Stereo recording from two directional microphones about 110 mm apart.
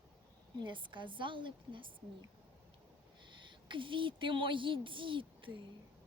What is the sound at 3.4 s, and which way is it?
Speech, 45° right (ahead or behind).